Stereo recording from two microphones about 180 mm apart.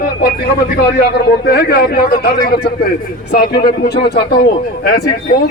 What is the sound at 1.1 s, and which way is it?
Speech, 60° left (ahead or behind).